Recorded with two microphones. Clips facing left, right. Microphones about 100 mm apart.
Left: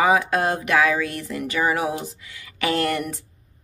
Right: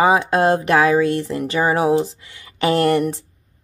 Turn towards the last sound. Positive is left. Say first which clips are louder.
# right 7 dB
turn(degrees=-30)  # may be behind; listen again after turning